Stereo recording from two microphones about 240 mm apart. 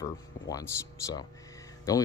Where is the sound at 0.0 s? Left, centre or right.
Centre.